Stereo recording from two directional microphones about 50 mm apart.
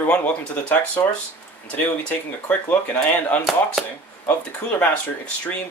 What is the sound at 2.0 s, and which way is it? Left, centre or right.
Speech, left.